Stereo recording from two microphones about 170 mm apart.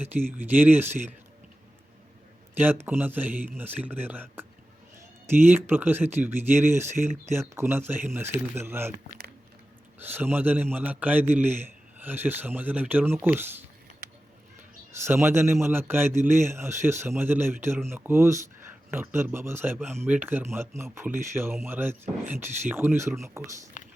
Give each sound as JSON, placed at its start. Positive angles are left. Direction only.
{"t": 0.0, "sound": "speech", "side_deg": -10}
{"t": 2.6, "sound": "speech", "side_deg": -10}
{"t": 10.0, "sound": "speech", "side_deg": -10}
{"t": 14.9, "sound": "speech", "side_deg": -15}
{"t": 23.8, "sound": "a sound", "side_deg": 45}